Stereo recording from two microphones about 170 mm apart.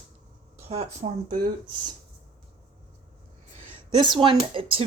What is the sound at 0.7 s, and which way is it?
Speech, 40° right (ahead or behind).